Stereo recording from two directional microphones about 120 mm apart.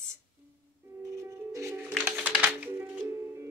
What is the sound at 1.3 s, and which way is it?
Music, 25° right (ahead or behind).